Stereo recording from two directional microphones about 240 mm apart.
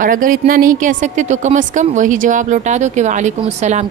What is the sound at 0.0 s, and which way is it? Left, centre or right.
Speech, right.